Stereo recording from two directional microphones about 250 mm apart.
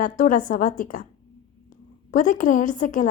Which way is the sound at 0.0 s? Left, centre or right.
Left.